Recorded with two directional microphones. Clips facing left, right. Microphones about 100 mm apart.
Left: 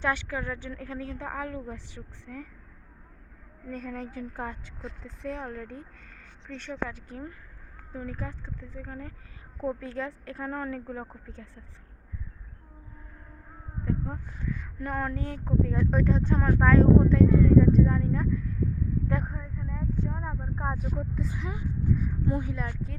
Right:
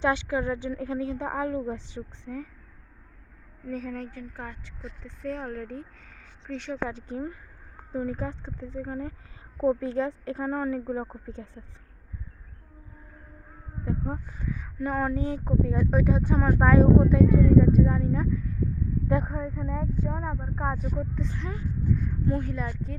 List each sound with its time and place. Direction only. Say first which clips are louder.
0.0 s a woman's voice: right 4 dB; 20° right (ahead or behind)
3.7 s a woman's voice: right 3 dB; centre (ahead or behind)
4.2 s a woman's voice: left 3 dB; 20° left (ahead or behind)
5.5 s speech: right 3 dB; centre (ahead or behind)
6.5 s a woman's voice: right 3 dB; 15° right (ahead or behind)
13.8 s a woman's voice: right 1 dB; 20° right (ahead or behind)
15.6 s speech: right 1 dB; 5° right (ahead or behind)
19.4 s speech: right 8 dB; 40° right (ahead or behind)
20.0 s a woman's voice: right 2 dB; 25° right (ahead or behind)
20.7 s speech: right 2 dB; 5° left (ahead or behind)
22.5 s a woman's voice: right 2 dB; centre (ahead or behind)